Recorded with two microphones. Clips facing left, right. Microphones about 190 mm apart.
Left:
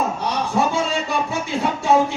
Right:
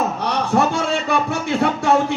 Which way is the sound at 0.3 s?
60° right (ahead or behind).